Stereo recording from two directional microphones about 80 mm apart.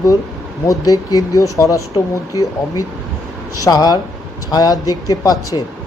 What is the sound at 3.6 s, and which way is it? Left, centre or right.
Speech, left.